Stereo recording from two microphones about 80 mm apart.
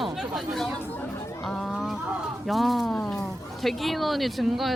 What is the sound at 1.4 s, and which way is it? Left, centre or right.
Speech, centre.